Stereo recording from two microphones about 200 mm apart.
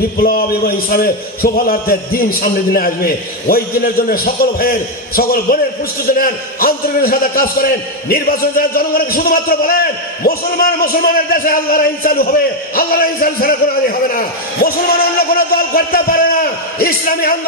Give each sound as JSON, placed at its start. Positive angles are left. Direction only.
{"t": 0.2, "sound": "a man's voice", "side_deg": 50}